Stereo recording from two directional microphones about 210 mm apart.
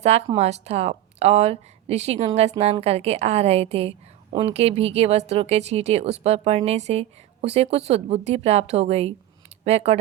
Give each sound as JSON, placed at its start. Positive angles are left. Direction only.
{"t": 0.0, "sound": "a woman's voice", "side_deg": -30}